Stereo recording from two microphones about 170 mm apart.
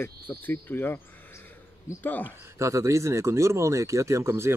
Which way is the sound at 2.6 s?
20° right (ahead or behind).